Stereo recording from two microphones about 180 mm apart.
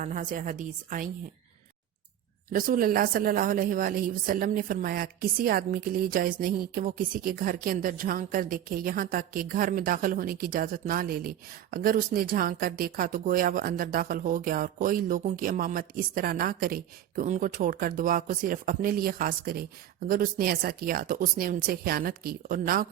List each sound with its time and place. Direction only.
0.0 s a woman's voice: 45° right (ahead or behind)
2.5 s a woman's voice: 50° right (ahead or behind)